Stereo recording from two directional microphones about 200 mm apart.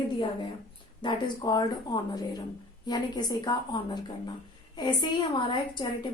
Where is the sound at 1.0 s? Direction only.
20° left (ahead or behind).